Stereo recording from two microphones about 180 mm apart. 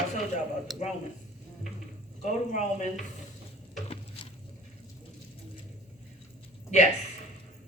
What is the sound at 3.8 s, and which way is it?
Stir, 35° left (ahead or behind).